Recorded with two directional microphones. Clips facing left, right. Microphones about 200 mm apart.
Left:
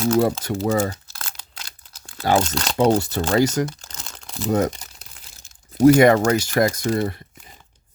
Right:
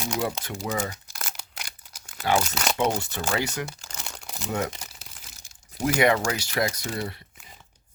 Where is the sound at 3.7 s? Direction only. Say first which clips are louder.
Even; 10° right (ahead or behind).